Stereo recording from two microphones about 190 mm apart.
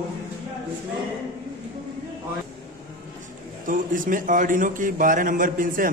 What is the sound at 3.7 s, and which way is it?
A man's voice, 45° right (ahead or behind).